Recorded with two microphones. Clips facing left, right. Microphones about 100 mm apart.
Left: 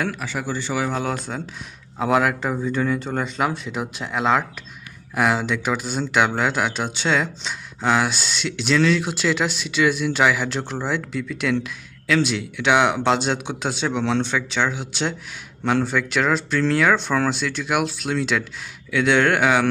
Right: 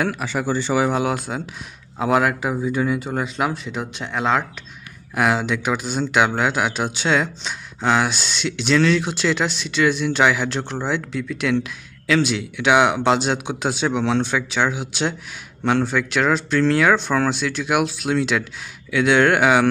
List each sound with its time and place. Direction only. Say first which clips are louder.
0.2 s speech: right 4 dB; 25° right (ahead or behind); by 19.7 s 5° right (ahead or behind)